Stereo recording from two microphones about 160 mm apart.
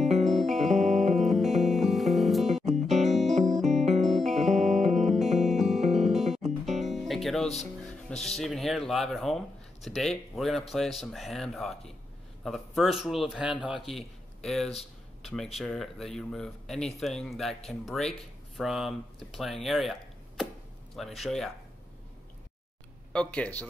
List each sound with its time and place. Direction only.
0.2 s music: centre (ahead or behind)
0.6 s music: 50° right (ahead or behind)
1.1 s music: centre (ahead or behind)
2.6 s music: 45° right (ahead or behind)
4.0 s music: centre (ahead or behind)
4.4 s music: 45° right (ahead or behind)
6.1 s music: centre (ahead or behind)
6.7 s music: 45° right (ahead or behind)
7.0 s music: centre (ahead or behind)
8.1 s speech: 5° left (ahead or behind)
23.1 s speech: 10° left (ahead or behind)